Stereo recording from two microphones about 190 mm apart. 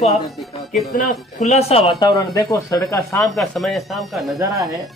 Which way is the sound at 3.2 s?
Centre (ahead or behind).